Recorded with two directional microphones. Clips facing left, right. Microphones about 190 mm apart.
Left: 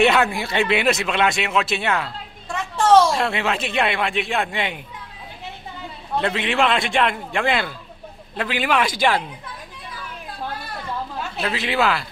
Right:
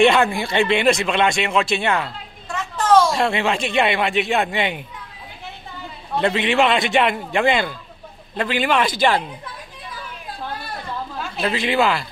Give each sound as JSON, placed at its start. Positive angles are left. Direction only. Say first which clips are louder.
{"t": 0.0, "sound": "speech", "louder": "right 2 dB", "side_deg": 5}
{"t": 3.1, "sound": "speech", "louder": "right 2 dB", "side_deg": 0}
{"t": 6.1, "sound": "speech", "louder": "right 3 dB", "side_deg": 0}
{"t": 11.4, "sound": "speech", "louder": "right 3 dB", "side_deg": 0}